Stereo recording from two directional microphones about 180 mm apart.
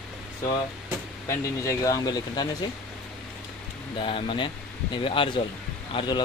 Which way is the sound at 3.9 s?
30° left (ahead or behind).